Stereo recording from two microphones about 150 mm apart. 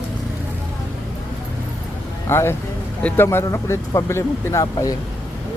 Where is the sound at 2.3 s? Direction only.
15° left (ahead or behind).